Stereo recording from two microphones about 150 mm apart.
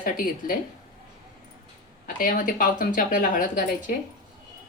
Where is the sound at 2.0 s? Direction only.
65° left (ahead or behind).